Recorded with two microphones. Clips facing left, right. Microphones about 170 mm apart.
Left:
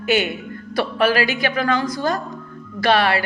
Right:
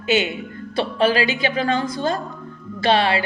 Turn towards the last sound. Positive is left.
turn(degrees=-20)  # may be behind; listen again after turning